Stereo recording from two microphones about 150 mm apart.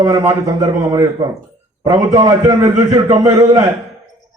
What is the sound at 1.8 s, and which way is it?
A man's voice, 30° right (ahead or behind).